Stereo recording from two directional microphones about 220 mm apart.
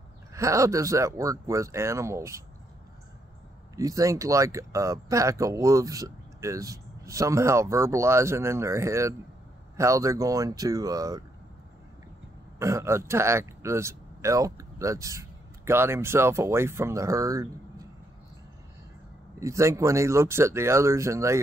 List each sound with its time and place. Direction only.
0.3 s speech: 15° right (ahead or behind)
3.7 s speech: 15° right (ahead or behind)
12.5 s a man's voice: 15° right (ahead or behind)
19.4 s speech: 15° right (ahead or behind)